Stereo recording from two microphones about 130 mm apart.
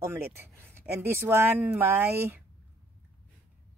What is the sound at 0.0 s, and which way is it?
Speech, 20° right (ahead or behind).